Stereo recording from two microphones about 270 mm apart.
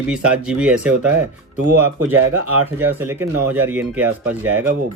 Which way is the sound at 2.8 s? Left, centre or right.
Centre.